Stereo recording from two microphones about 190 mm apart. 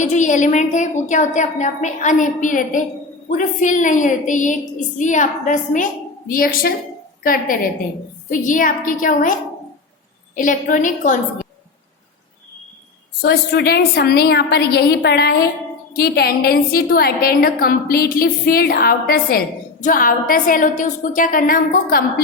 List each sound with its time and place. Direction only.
0.0 s a woman's voice: 40° left (ahead or behind)
10.3 s a woman's voice: 45° left (ahead or behind)
13.2 s a woman's voice: 55° left (ahead or behind)